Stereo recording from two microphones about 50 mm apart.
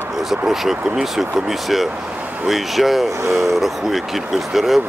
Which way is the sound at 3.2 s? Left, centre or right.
Right.